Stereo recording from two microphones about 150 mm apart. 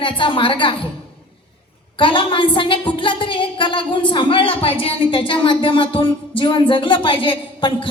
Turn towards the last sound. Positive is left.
turn(degrees=35)  # may be behind; listen again after turning